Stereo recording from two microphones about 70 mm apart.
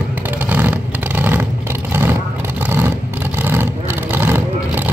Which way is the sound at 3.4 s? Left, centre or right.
Right.